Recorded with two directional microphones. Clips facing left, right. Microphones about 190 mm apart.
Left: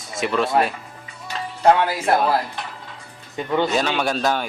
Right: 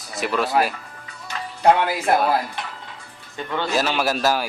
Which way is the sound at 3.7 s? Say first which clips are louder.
Even; 5° right (ahead or behind).